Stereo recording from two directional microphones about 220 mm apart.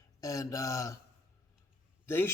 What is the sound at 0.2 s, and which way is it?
Speech, 15° left (ahead or behind).